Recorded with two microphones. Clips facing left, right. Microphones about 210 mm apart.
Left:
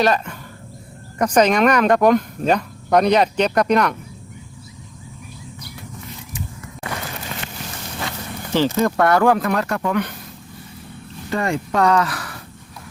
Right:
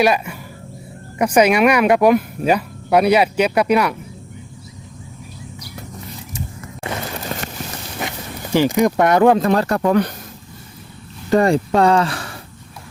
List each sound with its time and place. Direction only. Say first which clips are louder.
0.0 s speech: right 2 dB; 10° right (ahead or behind)
6.8 s vehicle: right 3 dB; 25° right (ahead or behind)
7.3 s a sound: right 7 dB; 40° right (ahead or behind)
8.0 s a sound: right 2 dB; 20° right (ahead or behind)
8.5 s speech: right 3 dB; 15° right (ahead or behind); by 10.1 s 35° right (ahead or behind)
11.3 s speech: right 7 dB; 35° right (ahead or behind)